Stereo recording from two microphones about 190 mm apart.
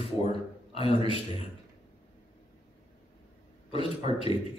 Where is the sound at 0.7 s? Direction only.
30° left (ahead or behind).